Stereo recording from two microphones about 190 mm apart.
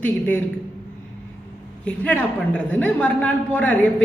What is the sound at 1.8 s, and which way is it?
A woman's voice, 5° left (ahead or behind).